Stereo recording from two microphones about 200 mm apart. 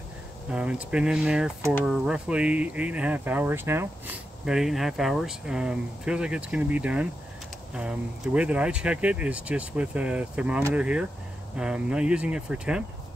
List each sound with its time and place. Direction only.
0.5 s speech: 5° right (ahead or behind)
8.4 s speech: 5° right (ahead or behind)